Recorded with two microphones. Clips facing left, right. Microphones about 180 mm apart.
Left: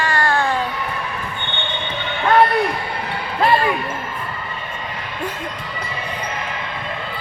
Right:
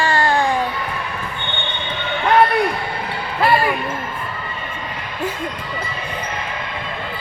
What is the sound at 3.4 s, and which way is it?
Speech, 5° right (ahead or behind).